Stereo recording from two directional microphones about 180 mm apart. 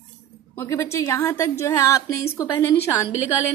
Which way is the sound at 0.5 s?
15° left (ahead or behind).